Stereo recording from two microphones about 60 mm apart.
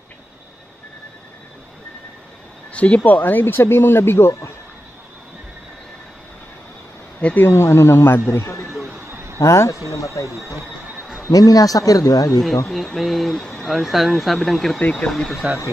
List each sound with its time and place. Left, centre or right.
2.7 s speech: left
7.3 s speech: left
9.4 s speech: left
10.3 s speech: right
11.3 s speech: left
12.6 s speech: centre
14.8 s speech: left
15.0 s speech: centre